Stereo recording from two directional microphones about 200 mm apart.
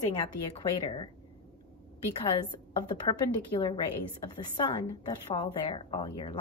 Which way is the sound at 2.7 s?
25° left (ahead or behind).